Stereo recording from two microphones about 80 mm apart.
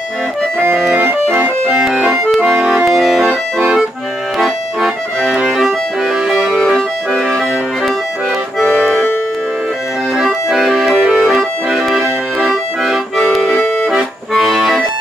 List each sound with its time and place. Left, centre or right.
0.9 s music: right
1.8 s accordion: centre
5.6 s music: centre
6.5 s accordion: centre
8.6 s accordion: centre
10.1 s accordion: centre
13.8 s accordion: centre